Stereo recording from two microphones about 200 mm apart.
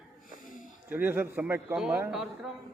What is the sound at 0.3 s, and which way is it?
Wheeze, 40° left (ahead or behind).